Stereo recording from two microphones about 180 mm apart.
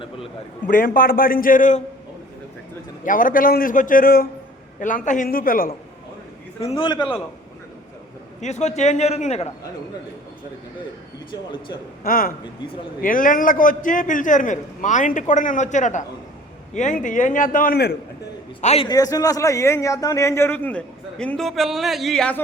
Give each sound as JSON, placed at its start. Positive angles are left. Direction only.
{"t": 0.7, "sound": "a man's voice", "side_deg": 50}
{"t": 3.0, "sound": "a man's voice", "side_deg": 50}
{"t": 6.6, "sound": "a man's voice", "side_deg": 30}
{"t": 8.4, "sound": "a man's voice", "side_deg": 40}
{"t": 12.0, "sound": "a man's voice", "side_deg": 55}
{"t": 18.6, "sound": "a man's voice", "side_deg": 35}
{"t": 18.9, "sound": "a man's voice", "side_deg": 20}